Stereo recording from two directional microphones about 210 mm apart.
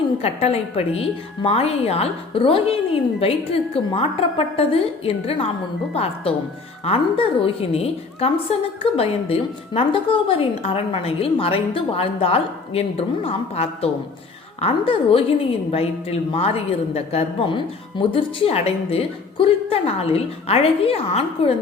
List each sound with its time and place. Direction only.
0.2 s a woman's voice: 30° left (ahead or behind)